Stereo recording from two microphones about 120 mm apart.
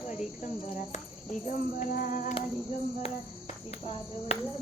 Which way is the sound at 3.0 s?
60° left (ahead or behind).